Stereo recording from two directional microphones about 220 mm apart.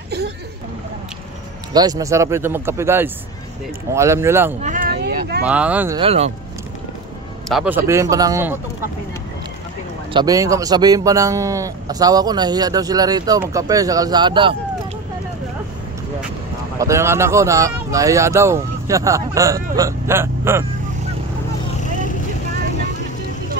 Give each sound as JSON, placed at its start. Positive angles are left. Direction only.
{"t": 1.7, "sound": "speech", "side_deg": -15}
{"t": 4.6, "sound": "a sound", "side_deg": -35}
{"t": 5.4, "sound": "speech", "side_deg": -5}
{"t": 5.9, "sound": "speech", "side_deg": -25}
{"t": 7.4, "sound": "speech", "side_deg": -5}
{"t": 10.1, "sound": "speech", "side_deg": -15}
{"t": 16.7, "sound": "speech", "side_deg": -15}